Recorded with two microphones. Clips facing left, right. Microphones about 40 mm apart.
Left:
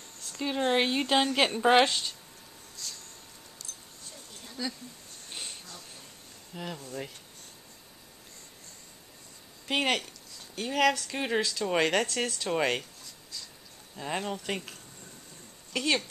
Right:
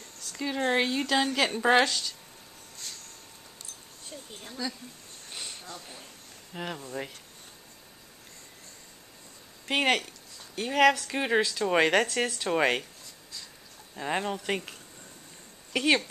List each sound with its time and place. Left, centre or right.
0.2 s a woman's voice: centre
1.5 s a woman's voice: centre
1.8 s a woman's voice: left
2.8 s a sound: right
4.3 s speech: right
5.7 s speech: right
6.8 s speech: centre
9.7 s speech: centre
13.9 s speech: centre
15.7 s speech: centre